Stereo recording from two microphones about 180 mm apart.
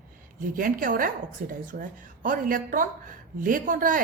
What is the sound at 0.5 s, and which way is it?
A woman's voice, 50° right (ahead or behind).